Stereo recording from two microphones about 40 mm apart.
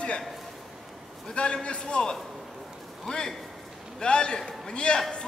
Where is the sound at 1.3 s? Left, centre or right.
Left.